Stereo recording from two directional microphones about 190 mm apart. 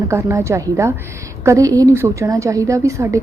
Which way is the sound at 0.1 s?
15° right (ahead or behind).